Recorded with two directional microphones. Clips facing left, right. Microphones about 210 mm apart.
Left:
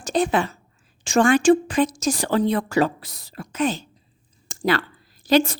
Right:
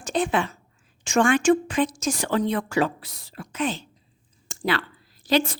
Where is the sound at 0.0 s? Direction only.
40° left (ahead or behind).